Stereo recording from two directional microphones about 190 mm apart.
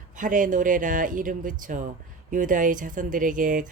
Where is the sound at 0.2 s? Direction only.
45° right (ahead or behind).